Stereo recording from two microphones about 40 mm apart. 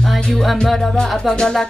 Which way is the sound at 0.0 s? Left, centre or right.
Centre.